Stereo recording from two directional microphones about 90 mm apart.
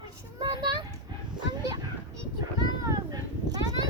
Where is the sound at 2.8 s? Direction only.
45° right (ahead or behind).